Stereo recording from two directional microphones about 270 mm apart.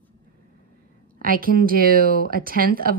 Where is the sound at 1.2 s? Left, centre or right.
Right.